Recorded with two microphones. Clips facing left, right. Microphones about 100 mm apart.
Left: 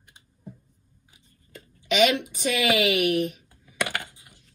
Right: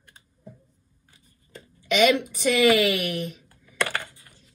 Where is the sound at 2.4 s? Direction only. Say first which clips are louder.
Right 4 dB; 45° right (ahead or behind).